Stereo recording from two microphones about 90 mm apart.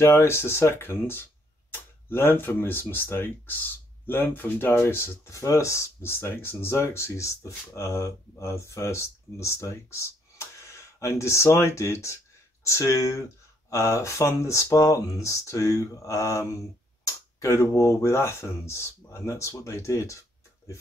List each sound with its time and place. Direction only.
0.0 s speech: 30° left (ahead or behind)